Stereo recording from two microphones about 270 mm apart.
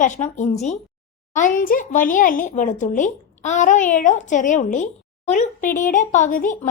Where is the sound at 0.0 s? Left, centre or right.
Left.